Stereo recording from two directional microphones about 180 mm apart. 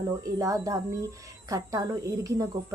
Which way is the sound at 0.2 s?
20° right (ahead or behind).